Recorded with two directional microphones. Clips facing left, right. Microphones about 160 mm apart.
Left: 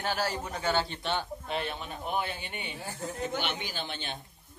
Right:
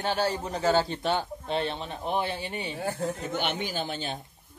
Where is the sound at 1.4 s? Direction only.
30° right (ahead or behind).